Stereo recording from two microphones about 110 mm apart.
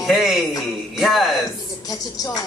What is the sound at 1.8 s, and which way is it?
Music, 35° left (ahead or behind).